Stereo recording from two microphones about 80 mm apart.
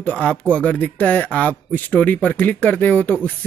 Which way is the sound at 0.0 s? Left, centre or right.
Centre.